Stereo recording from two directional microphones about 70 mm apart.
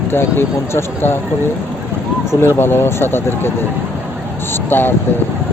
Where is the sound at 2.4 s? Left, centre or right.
Left.